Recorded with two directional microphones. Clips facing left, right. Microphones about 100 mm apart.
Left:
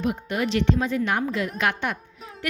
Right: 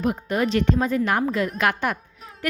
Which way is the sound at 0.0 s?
40° right (ahead or behind).